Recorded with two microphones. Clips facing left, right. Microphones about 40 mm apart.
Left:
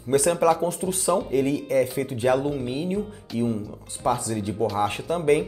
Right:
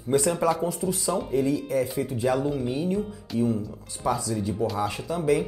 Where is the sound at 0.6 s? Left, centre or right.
Left.